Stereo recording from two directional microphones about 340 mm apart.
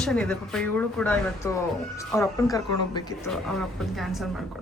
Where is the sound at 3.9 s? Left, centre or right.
Centre.